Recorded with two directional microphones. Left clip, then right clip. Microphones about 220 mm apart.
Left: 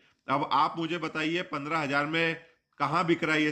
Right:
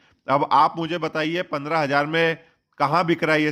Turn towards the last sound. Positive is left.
turn(degrees=-30)  # may be behind; listen again after turning